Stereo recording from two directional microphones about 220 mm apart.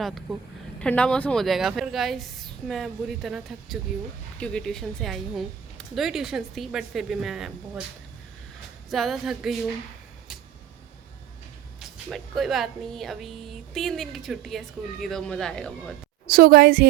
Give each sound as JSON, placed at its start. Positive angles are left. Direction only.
{"t": 0.0, "sound": "speech", "side_deg": 0}
{"t": 8.9, "sound": "speech", "side_deg": 0}
{"t": 11.8, "sound": "speech", "side_deg": 0}
{"t": 16.2, "sound": "a woman's voice", "side_deg": -40}